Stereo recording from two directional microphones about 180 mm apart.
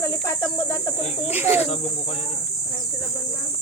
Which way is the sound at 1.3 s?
10° right (ahead or behind).